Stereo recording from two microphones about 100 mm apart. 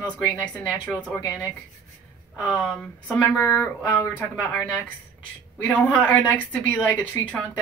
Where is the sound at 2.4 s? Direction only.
10° left (ahead or behind).